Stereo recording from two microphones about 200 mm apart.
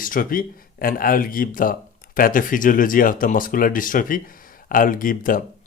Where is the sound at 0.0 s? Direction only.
45° left (ahead or behind).